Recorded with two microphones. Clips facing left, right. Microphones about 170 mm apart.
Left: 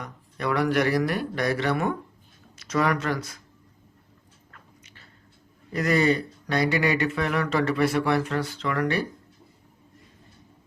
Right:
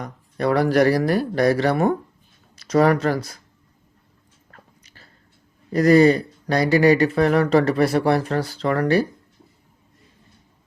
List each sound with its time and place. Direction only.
0.0 s speech: 35° right (ahead or behind)
5.7 s speech: 35° right (ahead or behind)